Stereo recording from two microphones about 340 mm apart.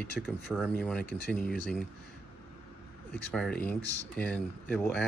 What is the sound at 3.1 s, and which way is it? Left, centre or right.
Speech, centre.